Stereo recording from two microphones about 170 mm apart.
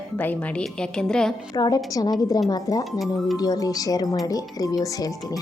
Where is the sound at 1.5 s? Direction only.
20° left (ahead or behind).